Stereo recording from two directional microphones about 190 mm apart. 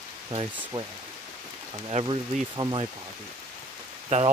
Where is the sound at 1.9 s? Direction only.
25° right (ahead or behind).